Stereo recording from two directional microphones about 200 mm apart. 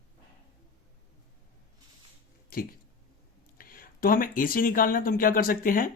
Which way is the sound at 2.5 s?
45° left (ahead or behind).